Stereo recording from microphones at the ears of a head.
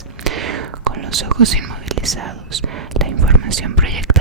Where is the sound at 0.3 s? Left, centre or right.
Right.